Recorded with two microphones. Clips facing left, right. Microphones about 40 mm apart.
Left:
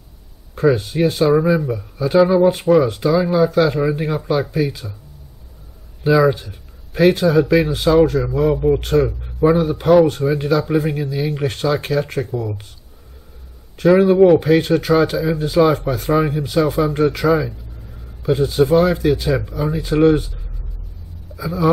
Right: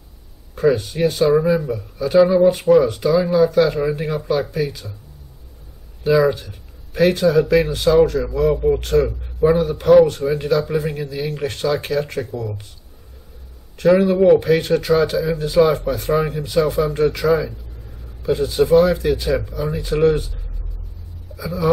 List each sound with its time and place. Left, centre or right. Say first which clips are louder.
0.6 s speech: left 1 dB; centre
6.0 s speech: left 1 dB; centre
13.7 s speech: left 3 dB; centre
21.4 s speech: left 1 dB; centre